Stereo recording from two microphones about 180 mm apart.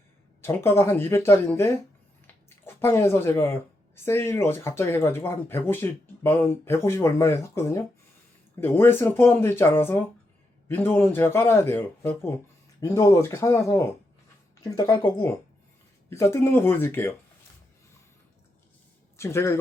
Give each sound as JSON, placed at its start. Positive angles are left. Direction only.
{"t": 0.4, "sound": "a woman's voice", "side_deg": 15}
{"t": 19.1, "sound": "speech", "side_deg": 15}